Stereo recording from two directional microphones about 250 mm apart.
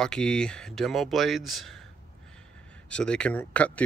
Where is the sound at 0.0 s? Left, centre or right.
Centre.